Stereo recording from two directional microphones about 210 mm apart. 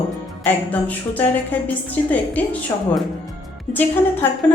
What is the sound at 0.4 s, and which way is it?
A woman's voice, 5° left (ahead or behind).